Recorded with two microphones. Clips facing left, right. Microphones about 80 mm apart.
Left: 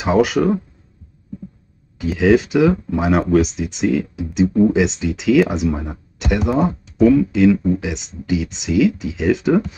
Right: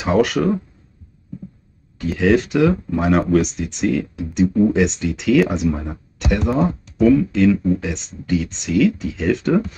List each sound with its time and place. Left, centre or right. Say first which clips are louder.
0.0 s speech: left 2 dB; centre
2.0 s speech: left 2 dB; centre
7.5 s speech: even; centre
7.8 s speech: left 1 dB; centre